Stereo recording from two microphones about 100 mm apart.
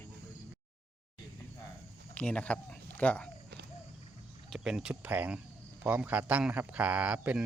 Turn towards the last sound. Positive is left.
turn(degrees=-15)  # may be behind; listen again after turning